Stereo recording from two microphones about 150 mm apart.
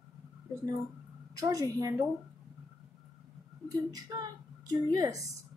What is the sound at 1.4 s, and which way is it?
Speech, 25° right (ahead or behind).